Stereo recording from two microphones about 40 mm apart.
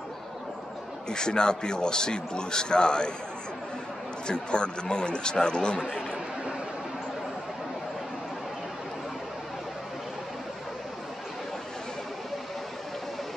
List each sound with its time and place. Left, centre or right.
1.0 s a man's voice: centre
4.3 s a man's voice: left